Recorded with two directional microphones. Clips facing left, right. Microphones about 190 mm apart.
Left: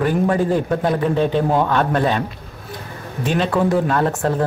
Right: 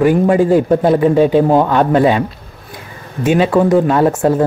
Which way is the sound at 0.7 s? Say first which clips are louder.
Right 8 dB; 25° right (ahead or behind).